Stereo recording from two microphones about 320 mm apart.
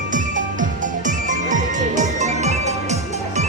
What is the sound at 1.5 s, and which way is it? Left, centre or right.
Music, right.